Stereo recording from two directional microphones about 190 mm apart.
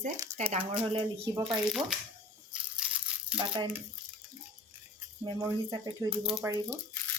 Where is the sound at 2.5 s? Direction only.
5° right (ahead or behind).